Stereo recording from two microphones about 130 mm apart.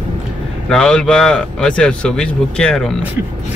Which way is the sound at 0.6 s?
5° left (ahead or behind).